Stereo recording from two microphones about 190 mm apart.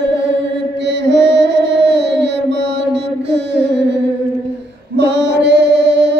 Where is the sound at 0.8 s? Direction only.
65° right (ahead or behind).